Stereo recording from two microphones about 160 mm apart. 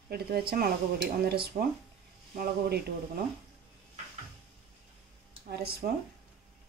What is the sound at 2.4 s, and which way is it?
Speech, 85° right.